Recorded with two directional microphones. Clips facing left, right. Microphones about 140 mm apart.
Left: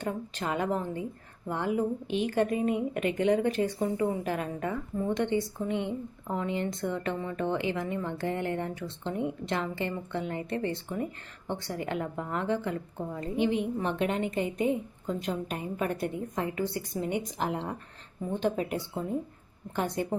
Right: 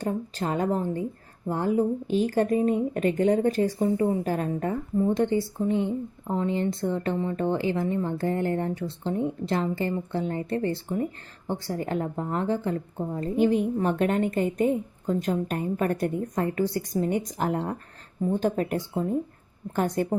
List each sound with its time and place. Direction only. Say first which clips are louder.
0.0 s a woman's voice: right 4 dB; 35° right (ahead or behind)